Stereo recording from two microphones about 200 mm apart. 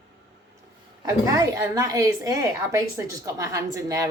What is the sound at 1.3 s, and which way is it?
A woman's voice, 15° right (ahead or behind).